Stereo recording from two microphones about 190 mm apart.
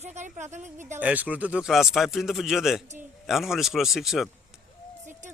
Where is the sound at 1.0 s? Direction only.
10° right (ahead or behind).